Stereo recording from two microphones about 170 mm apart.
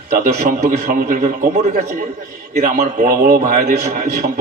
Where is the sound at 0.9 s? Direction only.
55° right (ahead or behind).